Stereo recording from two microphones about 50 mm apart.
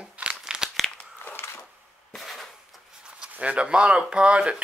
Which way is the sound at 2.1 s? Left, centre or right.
Centre.